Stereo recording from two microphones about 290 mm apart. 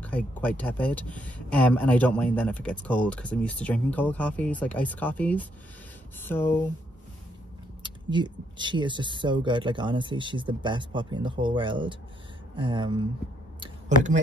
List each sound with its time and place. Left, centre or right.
0.0 s speech: centre
7.8 s speech: centre
13.6 s a sound: right